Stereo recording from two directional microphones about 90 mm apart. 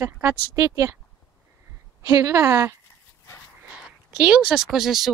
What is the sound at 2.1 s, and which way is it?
Speech, 35° right (ahead or behind).